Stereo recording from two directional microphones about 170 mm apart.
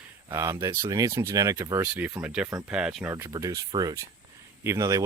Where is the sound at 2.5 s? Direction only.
15° right (ahead or behind).